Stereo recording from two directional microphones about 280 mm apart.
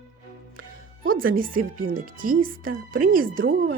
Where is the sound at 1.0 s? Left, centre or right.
Right.